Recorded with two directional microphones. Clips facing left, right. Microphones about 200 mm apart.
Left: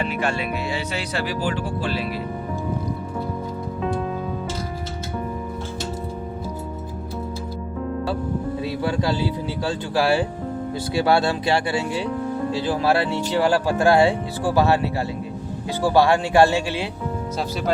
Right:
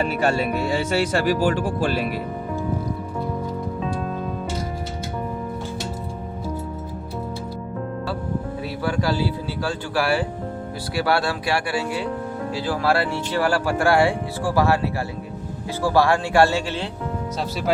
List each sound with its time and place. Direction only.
0.0 s speech: 40° right (ahead or behind)
8.6 s speech: 20° left (ahead or behind)
15.8 s speech: 20° left (ahead or behind)